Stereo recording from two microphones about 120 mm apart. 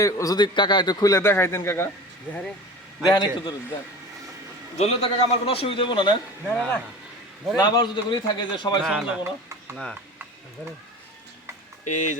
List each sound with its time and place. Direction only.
0.0 s a man's voice: 30° left (ahead or behind)
3.0 s a man's voice: 35° left (ahead or behind)
4.8 s a man's voice: 65° left (ahead or behind); by 6.1 s 45° left (ahead or behind)
6.5 s speech: 10° left (ahead or behind)
7.5 s a man's voice: 35° left (ahead or behind)
8.9 s speech: 10° right (ahead or behind)
11.9 s speech: 90° left